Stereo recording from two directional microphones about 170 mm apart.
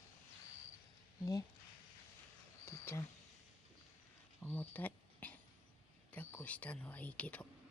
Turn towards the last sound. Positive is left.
turn(degrees=10)  # may be behind; listen again after turning